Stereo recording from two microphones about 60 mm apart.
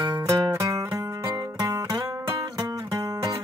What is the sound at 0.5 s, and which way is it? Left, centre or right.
Music, right.